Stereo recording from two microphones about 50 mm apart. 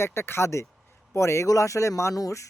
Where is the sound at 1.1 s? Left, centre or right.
Left.